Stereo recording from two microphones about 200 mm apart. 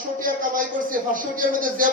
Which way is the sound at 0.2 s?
45° right (ahead or behind).